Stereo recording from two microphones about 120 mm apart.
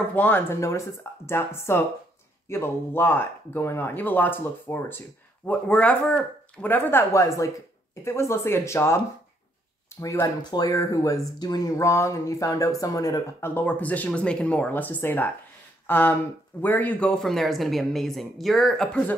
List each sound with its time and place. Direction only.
0.1 s speech: 15° left (ahead or behind)
13.6 s speech: 15° left (ahead or behind)